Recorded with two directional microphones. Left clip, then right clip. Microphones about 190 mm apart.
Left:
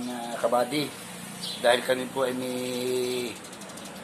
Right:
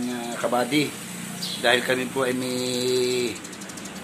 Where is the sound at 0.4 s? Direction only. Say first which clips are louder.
Right 2 dB; 10° right (ahead or behind).